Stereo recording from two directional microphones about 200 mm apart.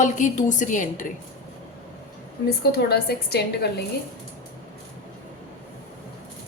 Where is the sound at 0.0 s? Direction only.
40° left (ahead or behind).